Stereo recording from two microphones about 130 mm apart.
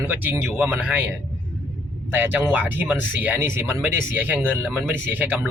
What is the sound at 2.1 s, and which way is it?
Speech, 15° right (ahead or behind).